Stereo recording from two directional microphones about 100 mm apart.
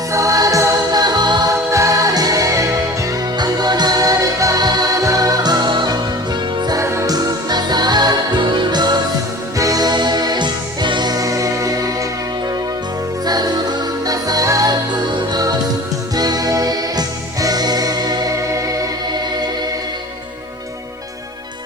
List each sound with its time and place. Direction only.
0.1 s music: 35° right (ahead or behind)
1.7 s music: 30° right (ahead or behind)
6.8 s music: 25° right (ahead or behind)
7.1 s music: 45° right (ahead or behind)
13.2 s music: 40° right (ahead or behind)